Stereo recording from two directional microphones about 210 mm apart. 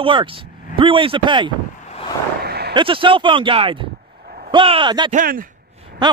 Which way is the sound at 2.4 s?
50° right (ahead or behind).